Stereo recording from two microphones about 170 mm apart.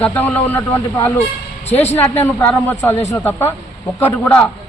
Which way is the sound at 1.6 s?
40° left (ahead or behind).